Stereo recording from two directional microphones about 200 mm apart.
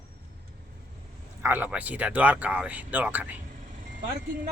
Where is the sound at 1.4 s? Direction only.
10° right (ahead or behind).